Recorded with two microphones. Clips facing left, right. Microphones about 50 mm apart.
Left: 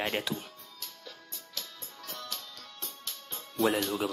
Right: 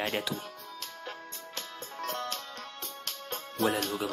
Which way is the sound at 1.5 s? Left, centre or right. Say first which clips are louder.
Right 4 dB; right.